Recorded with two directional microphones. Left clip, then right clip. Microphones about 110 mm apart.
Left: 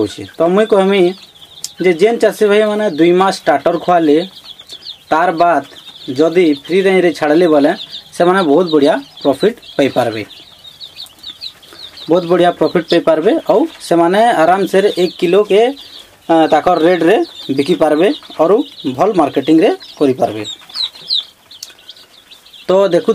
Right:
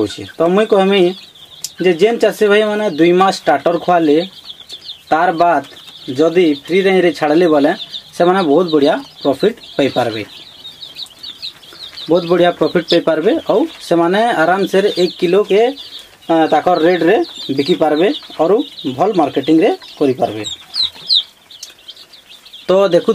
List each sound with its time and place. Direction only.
0.0 s speech: 5° right (ahead or behind)
12.1 s speech: 10° left (ahead or behind)
22.7 s speech: centre (ahead or behind)